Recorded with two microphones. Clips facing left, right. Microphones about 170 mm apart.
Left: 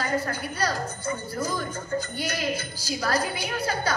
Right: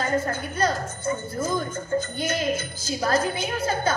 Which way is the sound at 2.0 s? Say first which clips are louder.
Right 4 dB; 20° right (ahead or behind).